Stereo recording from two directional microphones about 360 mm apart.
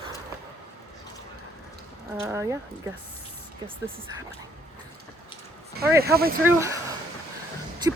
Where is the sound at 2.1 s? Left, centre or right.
Centre.